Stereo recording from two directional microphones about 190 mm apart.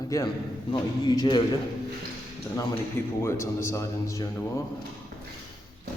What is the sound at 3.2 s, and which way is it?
A man's voice, 15° left (ahead or behind).